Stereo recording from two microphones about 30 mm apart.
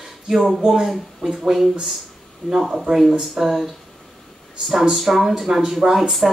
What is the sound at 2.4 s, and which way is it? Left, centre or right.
Speech, right.